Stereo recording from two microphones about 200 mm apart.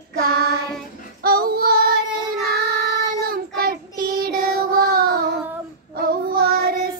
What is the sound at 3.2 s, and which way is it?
Child singing, 45° right (ahead or behind).